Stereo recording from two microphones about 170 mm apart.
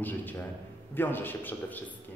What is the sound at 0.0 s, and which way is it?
A man's voice, 10° left (ahead or behind).